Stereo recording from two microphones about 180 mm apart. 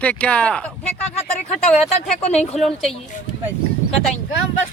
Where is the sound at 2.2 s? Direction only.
35° left (ahead or behind).